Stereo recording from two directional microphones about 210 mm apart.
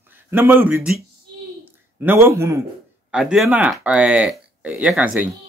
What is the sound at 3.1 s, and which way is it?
Speech, 5° right (ahead or behind).